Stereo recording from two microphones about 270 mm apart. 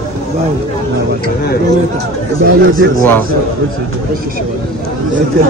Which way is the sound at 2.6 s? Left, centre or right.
Right.